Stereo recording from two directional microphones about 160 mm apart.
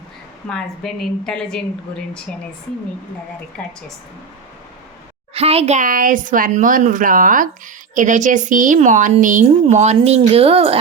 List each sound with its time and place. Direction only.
0.4 s a woman's voice: 5° left (ahead or behind)
3.6 s a woman's voice: 10° left (ahead or behind)
5.3 s a woman's voice: 40° right (ahead or behind)